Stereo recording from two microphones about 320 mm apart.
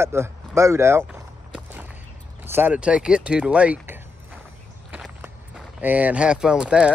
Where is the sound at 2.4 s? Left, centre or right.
Centre.